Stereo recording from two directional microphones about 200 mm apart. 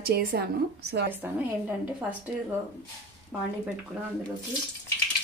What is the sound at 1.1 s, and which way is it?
Speech, 10° right (ahead or behind).